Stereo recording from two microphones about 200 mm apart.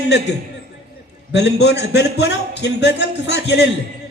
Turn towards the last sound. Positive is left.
turn(degrees=60)  # may be behind; listen again after turning